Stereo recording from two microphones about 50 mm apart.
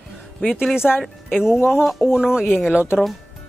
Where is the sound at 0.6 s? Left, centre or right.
Centre.